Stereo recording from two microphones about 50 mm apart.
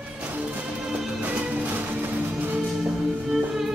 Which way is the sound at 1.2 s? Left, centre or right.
Right.